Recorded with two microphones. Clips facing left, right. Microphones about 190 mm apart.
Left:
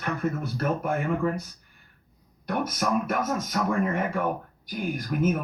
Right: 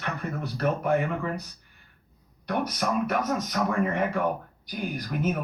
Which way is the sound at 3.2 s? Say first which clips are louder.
Even; 45° left (ahead or behind).